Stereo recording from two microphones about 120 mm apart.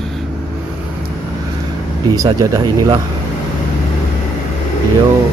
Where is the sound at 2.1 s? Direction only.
30° right (ahead or behind).